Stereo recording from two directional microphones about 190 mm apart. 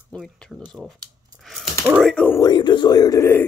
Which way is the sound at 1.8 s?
5° right (ahead or behind).